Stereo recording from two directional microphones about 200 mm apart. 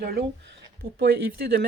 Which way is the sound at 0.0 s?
55° right (ahead or behind).